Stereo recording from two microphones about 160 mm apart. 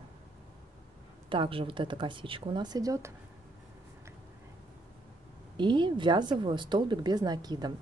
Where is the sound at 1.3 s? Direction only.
35° right (ahead or behind).